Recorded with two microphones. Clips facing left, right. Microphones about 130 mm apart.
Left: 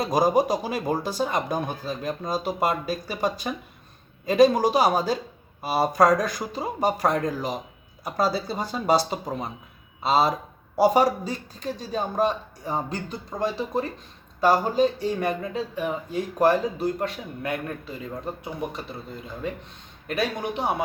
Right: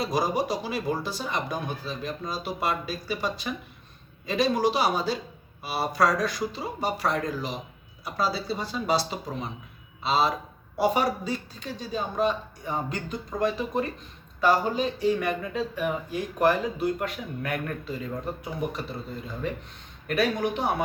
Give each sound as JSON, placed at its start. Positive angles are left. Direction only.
{"t": 0.0, "sound": "speech", "side_deg": 45}
{"t": 20.1, "sound": "speech", "side_deg": 25}